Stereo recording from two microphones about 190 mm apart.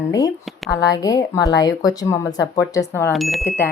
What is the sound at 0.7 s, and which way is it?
Speech, 20° left (ahead or behind).